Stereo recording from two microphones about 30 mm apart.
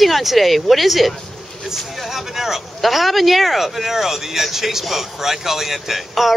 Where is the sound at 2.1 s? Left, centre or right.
Centre.